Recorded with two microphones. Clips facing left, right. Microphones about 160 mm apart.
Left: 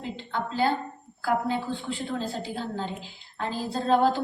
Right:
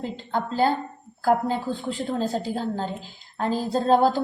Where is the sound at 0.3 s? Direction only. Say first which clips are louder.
Right 3 dB; 45° right (ahead or behind).